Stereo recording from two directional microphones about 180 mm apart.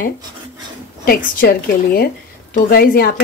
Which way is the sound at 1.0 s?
55° left (ahead or behind).